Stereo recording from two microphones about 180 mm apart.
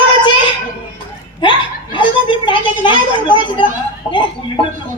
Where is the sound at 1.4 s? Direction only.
25° left (ahead or behind).